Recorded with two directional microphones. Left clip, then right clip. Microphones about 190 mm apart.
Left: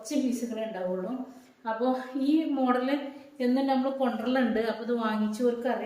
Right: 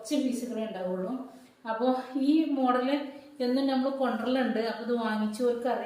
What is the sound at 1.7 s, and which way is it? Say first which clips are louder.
A woman's voice: right 1 dB; 15° left (ahead or behind).